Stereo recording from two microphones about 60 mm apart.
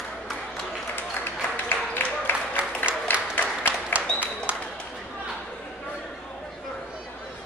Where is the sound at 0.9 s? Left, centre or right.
Left.